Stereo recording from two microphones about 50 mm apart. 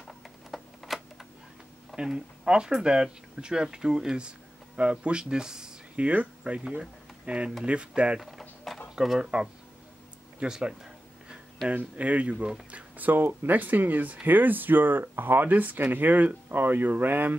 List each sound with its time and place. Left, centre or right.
0.0 s camera: centre
2.0 s speech: centre
5.9 s speech: right
8.2 s a sound: centre
8.9 s speech: centre
10.4 s a sound: centre
11.7 s speech: right
12.7 s speech: right